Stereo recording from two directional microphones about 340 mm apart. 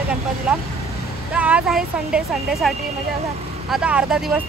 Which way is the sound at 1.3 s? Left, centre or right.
Centre.